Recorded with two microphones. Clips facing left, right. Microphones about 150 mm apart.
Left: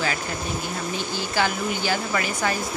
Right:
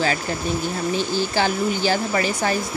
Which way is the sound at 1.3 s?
30° right (ahead or behind).